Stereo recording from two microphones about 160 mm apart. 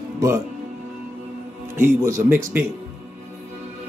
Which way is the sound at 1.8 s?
15° right (ahead or behind).